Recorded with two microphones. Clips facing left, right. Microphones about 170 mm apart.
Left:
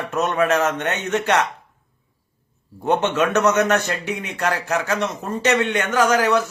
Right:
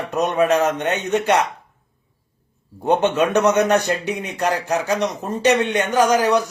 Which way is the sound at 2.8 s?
15° right (ahead or behind).